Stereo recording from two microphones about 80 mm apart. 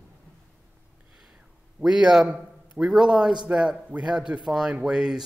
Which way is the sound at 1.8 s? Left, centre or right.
Centre.